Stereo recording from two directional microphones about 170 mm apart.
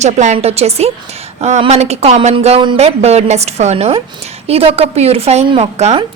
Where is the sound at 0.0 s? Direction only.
45° right (ahead or behind).